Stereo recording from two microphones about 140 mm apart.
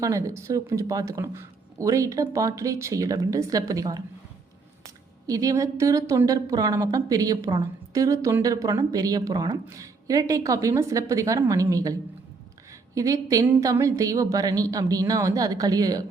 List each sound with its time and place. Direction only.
0.0 s a woman's voice: 20° right (ahead or behind)
5.2 s a woman's voice: 25° right (ahead or behind)